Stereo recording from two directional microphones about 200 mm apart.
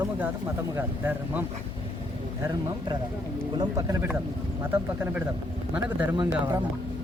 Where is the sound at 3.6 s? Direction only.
15° right (ahead or behind).